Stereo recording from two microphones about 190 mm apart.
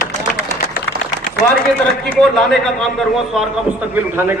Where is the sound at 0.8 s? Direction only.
45° left (ahead or behind).